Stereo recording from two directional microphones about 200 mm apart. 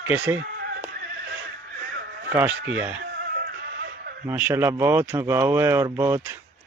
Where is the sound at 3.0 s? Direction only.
55° right (ahead or behind).